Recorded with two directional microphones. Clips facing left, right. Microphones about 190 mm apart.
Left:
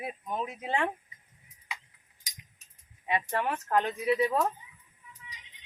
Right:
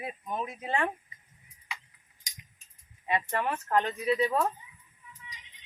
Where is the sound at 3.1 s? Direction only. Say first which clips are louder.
Even; 15° left (ahead or behind).